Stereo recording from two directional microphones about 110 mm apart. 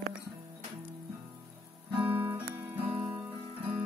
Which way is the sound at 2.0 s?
20° right (ahead or behind).